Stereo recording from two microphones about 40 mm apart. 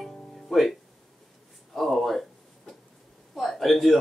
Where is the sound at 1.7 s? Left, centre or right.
Centre.